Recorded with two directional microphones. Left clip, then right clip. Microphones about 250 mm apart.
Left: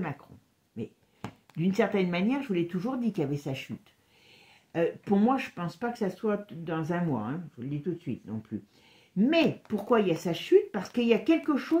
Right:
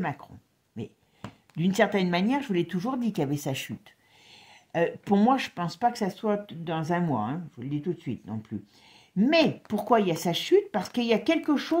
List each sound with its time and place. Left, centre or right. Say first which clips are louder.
1.6 s speech: right 3 dB; right